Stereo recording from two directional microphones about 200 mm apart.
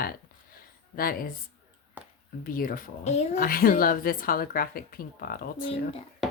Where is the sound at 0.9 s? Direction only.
45° left (ahead or behind).